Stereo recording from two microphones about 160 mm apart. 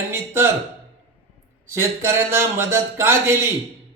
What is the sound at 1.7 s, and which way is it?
A man's voice, 15° right (ahead or behind).